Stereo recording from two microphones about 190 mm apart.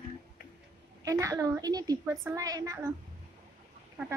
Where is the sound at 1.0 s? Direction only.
15° right (ahead or behind).